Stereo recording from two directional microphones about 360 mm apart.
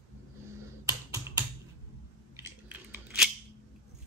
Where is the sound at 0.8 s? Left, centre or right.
Centre.